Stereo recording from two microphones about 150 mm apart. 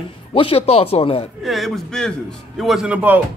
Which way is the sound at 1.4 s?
Centre (ahead or behind).